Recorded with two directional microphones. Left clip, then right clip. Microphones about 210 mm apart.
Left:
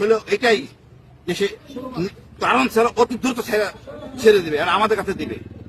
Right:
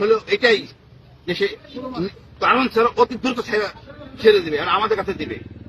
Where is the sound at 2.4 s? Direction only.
25° left (ahead or behind).